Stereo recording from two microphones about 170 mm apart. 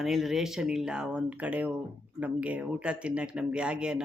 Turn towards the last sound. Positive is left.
turn(degrees=-5)  # may be behind; listen again after turning